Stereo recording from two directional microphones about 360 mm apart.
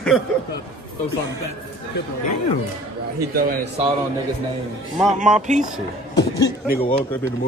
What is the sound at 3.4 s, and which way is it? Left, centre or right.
Speech, right.